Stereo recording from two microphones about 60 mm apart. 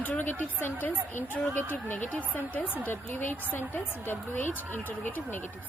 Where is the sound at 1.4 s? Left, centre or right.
Centre.